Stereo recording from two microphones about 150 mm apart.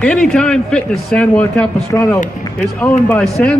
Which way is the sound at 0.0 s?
5° left (ahead or behind).